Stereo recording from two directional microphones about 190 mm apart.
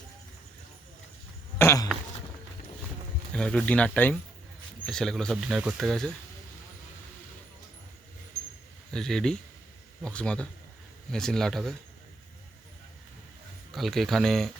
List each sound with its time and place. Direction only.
1.5 s a sound: 15° left (ahead or behind)
3.3 s speech: 5° left (ahead or behind)
8.9 s speech: 5° left (ahead or behind)
13.7 s speech: centre (ahead or behind)